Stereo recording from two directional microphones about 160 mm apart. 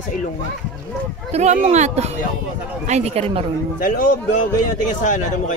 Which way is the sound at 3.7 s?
60° left (ahead or behind).